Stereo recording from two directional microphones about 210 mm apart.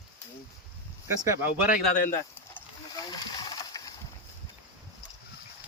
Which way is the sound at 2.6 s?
15° left (ahead or behind).